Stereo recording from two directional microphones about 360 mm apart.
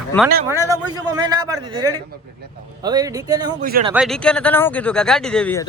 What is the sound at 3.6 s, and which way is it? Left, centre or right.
Speech, right.